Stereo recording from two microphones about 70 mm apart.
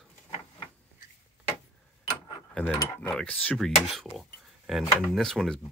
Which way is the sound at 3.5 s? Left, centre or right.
Centre.